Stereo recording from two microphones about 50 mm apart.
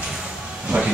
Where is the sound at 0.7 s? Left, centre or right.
Right.